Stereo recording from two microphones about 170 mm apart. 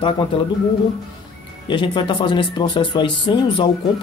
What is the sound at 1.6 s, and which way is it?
Speech, 30° left (ahead or behind).